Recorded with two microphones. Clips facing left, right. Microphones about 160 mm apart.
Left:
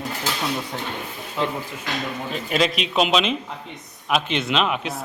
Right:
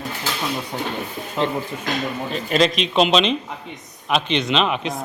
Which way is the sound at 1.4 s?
20° right (ahead or behind).